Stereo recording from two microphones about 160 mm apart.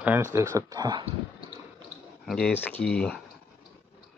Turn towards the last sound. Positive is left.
turn(degrees=5)  # may be behind; listen again after turning